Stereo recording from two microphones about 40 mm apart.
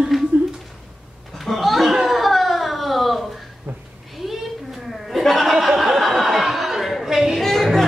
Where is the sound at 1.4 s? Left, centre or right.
Centre.